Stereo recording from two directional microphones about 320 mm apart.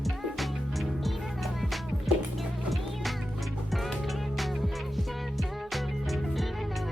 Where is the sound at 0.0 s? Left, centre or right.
Centre.